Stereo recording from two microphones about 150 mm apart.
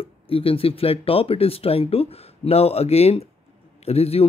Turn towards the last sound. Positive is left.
turn(degrees=40)  # may be behind; listen again after turning